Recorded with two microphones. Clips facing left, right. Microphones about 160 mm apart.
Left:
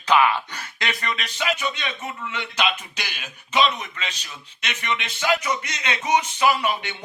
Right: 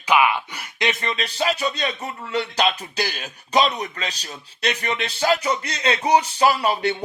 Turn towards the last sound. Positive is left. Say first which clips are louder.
# right 3 dB
turn(degrees=-35)  # may be behind; listen again after turning